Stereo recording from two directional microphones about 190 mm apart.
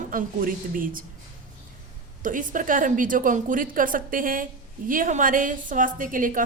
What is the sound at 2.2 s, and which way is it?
A woman's voice, 45° right (ahead or behind).